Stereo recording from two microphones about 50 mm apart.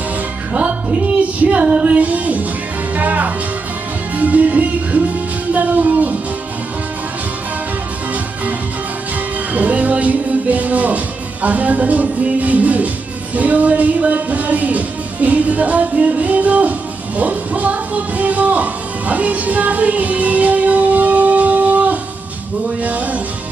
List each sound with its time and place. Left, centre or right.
0.5 s music: right
9.5 s music: right